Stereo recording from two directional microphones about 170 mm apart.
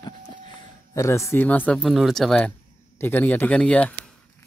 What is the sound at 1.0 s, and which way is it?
Speech, 15° left (ahead or behind).